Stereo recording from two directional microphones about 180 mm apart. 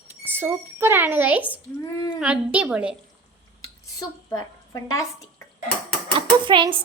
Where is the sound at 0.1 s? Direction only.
10° right (ahead or behind).